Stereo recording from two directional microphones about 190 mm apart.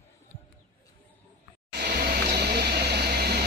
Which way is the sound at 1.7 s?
55° right (ahead or behind).